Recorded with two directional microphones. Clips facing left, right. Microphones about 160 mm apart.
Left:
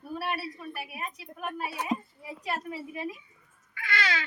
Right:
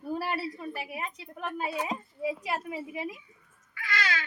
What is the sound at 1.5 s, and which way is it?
Speech, 25° right (ahead or behind).